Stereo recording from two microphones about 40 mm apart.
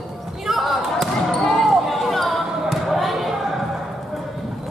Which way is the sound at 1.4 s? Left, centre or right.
Centre.